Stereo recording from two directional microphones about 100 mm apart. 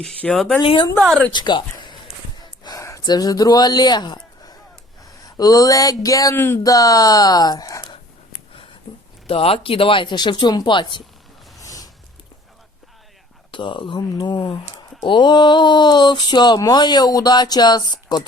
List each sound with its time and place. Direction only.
0.0 s speech: 5° left (ahead or behind)
0.6 s a woman's voice: 60° left (ahead or behind)
1.3 s speech: 50° left (ahead or behind)
2.4 s gasp: 35° left (ahead or behind)
5.2 s speech: 40° left (ahead or behind)
6.3 s speech: 20° left (ahead or behind)
6.6 s speech: 35° left (ahead or behind)
8.9 s a sound: 50° left (ahead or behind)
9.2 s speech: 70° left (ahead or behind); by 11.0 s 55° left (ahead or behind)
11.6 s a sound: 35° left (ahead or behind)
13.5 s speech: 55° left (ahead or behind)